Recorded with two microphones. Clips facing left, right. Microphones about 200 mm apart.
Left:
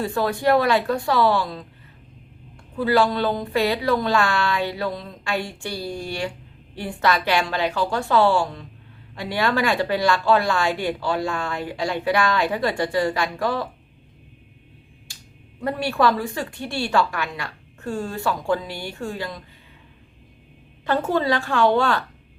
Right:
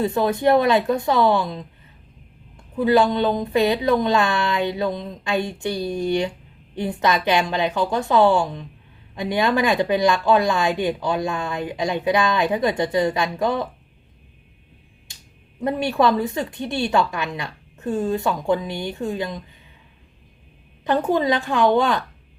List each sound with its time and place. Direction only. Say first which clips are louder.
0.0 s speech: right 3 dB; 20° right (ahead or behind)
2.7 s speech: right 2 dB; 20° right (ahead or behind)
15.1 s finger snapping: left 1 dB; 20° right (ahead or behind)
15.6 s speech: right 2 dB; 20° right (ahead or behind)
20.8 s a woman's voice: right 2 dB; 20° right (ahead or behind)